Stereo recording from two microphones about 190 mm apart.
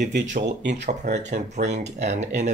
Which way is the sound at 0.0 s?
65° right (ahead or behind).